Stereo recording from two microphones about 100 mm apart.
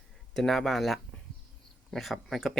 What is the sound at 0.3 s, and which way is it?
Speech, 5° left (ahead or behind).